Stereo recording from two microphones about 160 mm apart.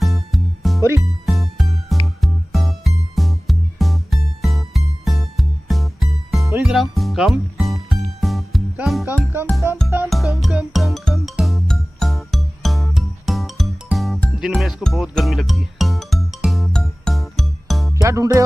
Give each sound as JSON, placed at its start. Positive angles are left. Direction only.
{"t": 0.0, "sound": "music", "side_deg": 0}
{"t": 9.6, "sound": "music", "side_deg": -15}
{"t": 10.0, "sound": "music", "side_deg": 0}
{"t": 18.0, "sound": "music", "side_deg": -20}